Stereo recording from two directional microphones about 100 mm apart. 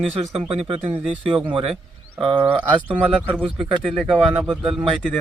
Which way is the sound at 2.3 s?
60° right (ahead or behind).